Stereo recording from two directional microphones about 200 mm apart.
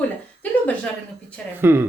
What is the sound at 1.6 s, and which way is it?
Speech, 10° right (ahead or behind).